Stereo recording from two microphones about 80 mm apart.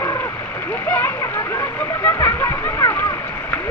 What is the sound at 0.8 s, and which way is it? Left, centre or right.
Speech, left.